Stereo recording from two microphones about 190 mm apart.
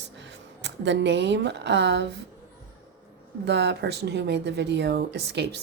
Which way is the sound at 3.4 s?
60° right (ahead or behind).